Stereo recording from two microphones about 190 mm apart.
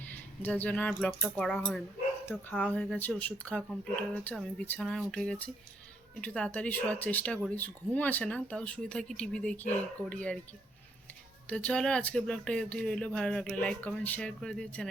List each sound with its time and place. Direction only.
0.1 s speech: 10° left (ahead or behind)
11.4 s speech: 5° left (ahead or behind)